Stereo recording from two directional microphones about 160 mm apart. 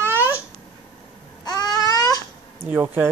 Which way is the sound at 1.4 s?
25° left (ahead or behind).